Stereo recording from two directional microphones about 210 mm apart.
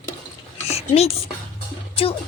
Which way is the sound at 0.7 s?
30° left (ahead or behind).